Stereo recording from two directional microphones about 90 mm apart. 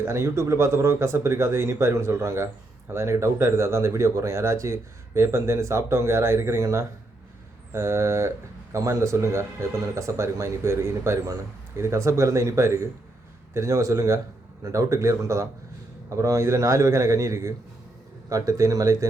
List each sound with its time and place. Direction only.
0.0 s speech: 30° right (ahead or behind)